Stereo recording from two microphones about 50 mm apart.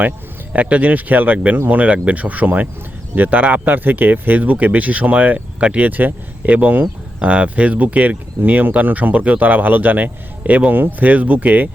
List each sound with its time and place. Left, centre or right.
0.5 s speech: right